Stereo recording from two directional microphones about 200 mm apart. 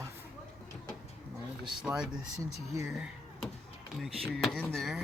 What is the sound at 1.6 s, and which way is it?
Speech, 5° right (ahead or behind).